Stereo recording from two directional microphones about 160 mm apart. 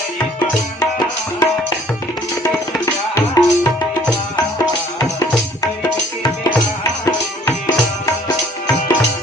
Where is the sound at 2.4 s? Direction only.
20° left (ahead or behind).